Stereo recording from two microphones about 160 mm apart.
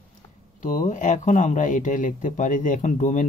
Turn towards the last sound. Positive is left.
turn(degrees=50)  # may be behind; listen again after turning